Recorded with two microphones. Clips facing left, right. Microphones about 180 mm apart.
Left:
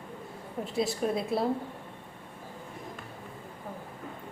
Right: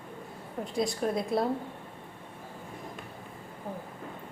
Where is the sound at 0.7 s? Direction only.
5° left (ahead or behind).